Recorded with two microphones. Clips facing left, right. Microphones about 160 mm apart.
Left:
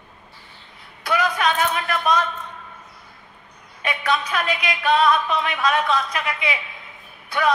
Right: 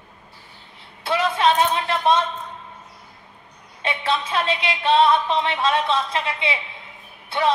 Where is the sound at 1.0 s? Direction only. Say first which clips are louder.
Right 2 dB; 25° right (ahead or behind).